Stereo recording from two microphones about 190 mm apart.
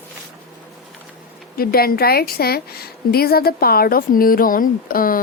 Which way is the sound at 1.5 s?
55° left (ahead or behind).